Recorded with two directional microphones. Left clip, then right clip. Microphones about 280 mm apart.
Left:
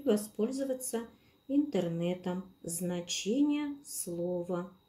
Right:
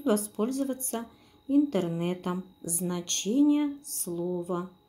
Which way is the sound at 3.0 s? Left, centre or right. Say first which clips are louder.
Right 4 dB; right.